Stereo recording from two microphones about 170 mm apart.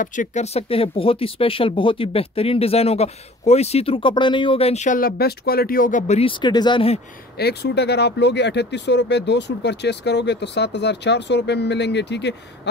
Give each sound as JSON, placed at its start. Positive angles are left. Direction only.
{"t": 0.0, "sound": "speech", "side_deg": 50}
{"t": 6.4, "sound": "speech", "side_deg": 25}
{"t": 7.3, "sound": "speech", "side_deg": 75}